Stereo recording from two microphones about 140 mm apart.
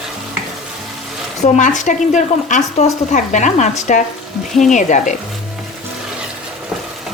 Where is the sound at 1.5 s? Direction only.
60° left (ahead or behind).